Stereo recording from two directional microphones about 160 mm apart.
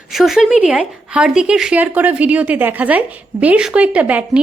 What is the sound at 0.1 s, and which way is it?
A woman's voice, centre (ahead or behind).